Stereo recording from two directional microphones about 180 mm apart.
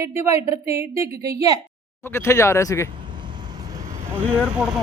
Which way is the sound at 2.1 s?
15° left (ahead or behind).